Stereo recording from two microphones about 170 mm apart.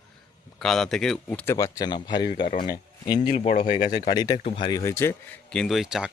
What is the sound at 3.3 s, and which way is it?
Speech, 40° left (ahead or behind).